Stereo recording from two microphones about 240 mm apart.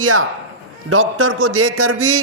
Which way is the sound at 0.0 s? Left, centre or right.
Right.